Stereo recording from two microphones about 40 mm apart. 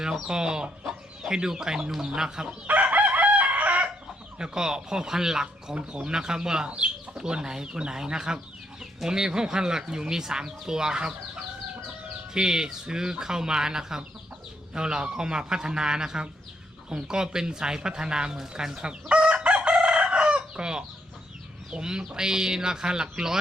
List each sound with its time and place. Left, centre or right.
0.3 s speech: centre
0.9 s chicken: centre
1.4 s speech: centre
2.6 s chicken: right
4.4 s speech: centre
6.7 s speech: right
12.3 s speech: centre
18.5 s chicken: right
21.7 s speech: centre